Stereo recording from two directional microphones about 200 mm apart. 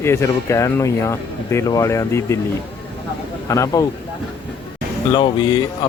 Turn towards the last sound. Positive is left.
turn(degrees=20)  # may be behind; listen again after turning